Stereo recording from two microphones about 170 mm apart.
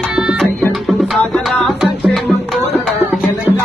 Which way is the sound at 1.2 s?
10° left (ahead or behind).